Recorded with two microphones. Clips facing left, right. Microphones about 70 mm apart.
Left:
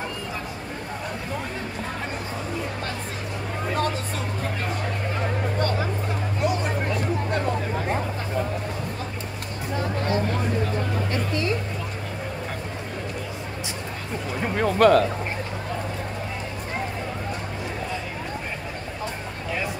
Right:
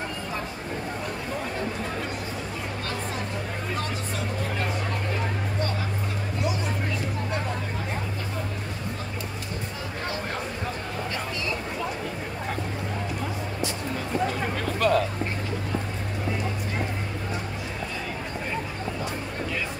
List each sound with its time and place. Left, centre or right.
14.8 s speech: left